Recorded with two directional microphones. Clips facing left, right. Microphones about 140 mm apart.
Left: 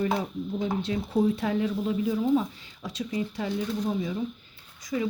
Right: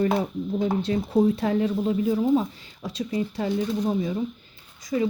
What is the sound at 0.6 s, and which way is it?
Speech, 45° right (ahead or behind).